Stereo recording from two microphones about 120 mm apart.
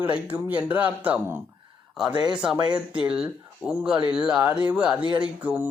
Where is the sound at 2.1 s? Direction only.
35° right (ahead or behind).